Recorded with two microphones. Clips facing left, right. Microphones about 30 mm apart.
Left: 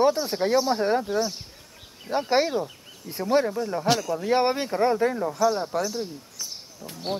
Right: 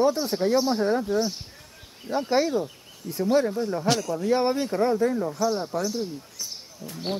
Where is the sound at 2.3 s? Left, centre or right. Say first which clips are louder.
Even; left.